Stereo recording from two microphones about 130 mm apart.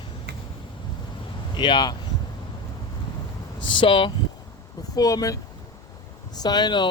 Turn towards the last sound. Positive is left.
turn(degrees=35)  # may be behind; listen again after turning